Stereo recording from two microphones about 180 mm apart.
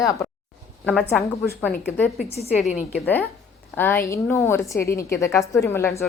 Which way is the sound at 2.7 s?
40° left (ahead or behind).